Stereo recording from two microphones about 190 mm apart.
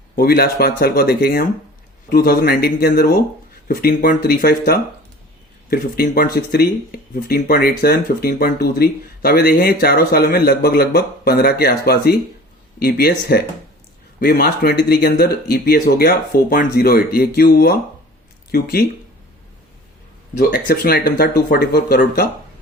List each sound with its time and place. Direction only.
0.2 s speech: 55° left (ahead or behind)
20.3 s speech: 55° left (ahead or behind)